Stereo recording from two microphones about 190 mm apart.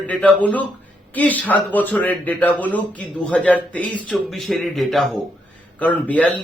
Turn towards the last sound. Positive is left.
turn(degrees=5)  # may be behind; listen again after turning